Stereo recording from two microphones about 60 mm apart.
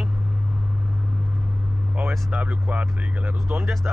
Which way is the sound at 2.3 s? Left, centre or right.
Right.